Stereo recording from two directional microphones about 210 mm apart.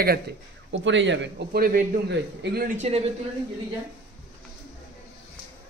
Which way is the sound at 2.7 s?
30° right (ahead or behind).